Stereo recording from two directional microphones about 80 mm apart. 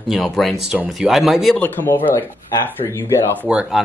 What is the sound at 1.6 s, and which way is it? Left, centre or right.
Speech, left.